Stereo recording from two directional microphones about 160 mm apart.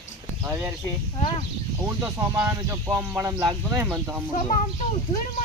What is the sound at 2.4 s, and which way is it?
Speech, 20° right (ahead or behind).